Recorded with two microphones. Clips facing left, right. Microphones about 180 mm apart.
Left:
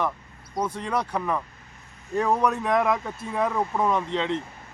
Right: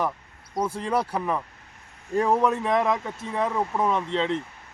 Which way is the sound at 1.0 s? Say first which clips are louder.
Even; 5° right (ahead or behind).